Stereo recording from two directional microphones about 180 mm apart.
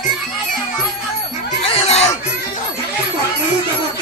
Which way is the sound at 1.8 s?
35° left (ahead or behind).